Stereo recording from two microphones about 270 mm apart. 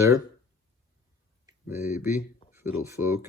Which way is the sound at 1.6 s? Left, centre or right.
Centre.